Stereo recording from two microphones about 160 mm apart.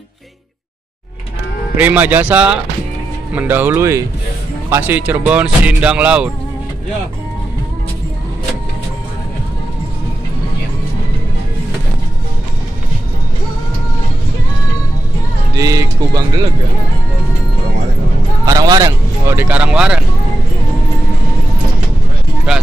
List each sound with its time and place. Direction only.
1.8 s speech: 10° right (ahead or behind)
15.5 s speech: 20° right (ahead or behind)
18.4 s speech: 20° right (ahead or behind); by 20.1 s 5° right (ahead or behind)